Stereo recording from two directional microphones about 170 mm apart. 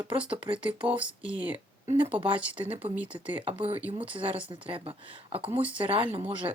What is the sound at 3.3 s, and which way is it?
Speech, 35° right (ahead or behind).